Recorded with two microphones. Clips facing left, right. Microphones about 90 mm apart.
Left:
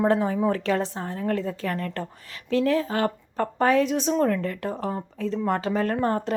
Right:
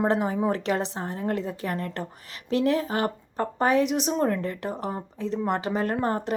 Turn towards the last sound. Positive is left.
turn(degrees=-10)  # may be behind; listen again after turning